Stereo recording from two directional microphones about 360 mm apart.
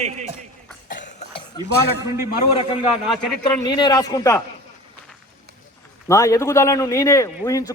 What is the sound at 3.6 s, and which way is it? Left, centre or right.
Speech, centre.